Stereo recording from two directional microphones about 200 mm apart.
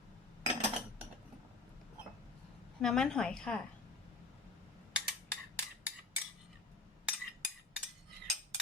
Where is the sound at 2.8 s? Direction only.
Centre (ahead or behind).